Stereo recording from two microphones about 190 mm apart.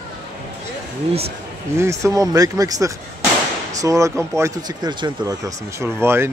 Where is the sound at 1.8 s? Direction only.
15° right (ahead or behind).